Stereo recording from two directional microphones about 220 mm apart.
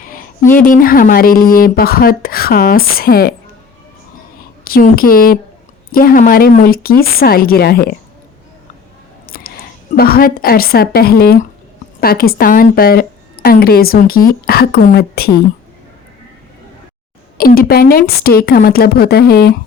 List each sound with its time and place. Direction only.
0.0 s a sound: 40° left (ahead or behind)
0.6 s a woman's voice: 40° left (ahead or behind)
4.6 s a woman's voice: 40° left (ahead or behind)
9.9 s a woman's voice: 40° left (ahead or behind)
17.3 s a woman's voice: 40° left (ahead or behind)